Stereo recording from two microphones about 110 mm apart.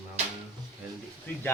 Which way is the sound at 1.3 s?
20° left (ahead or behind).